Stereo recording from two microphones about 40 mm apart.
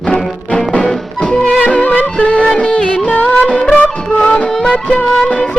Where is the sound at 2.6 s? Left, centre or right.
Left.